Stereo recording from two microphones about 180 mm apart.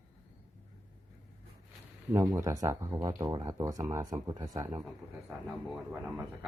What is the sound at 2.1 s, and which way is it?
Speech, 15° right (ahead or behind).